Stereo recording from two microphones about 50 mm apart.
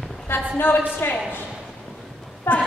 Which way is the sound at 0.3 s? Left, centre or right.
Left.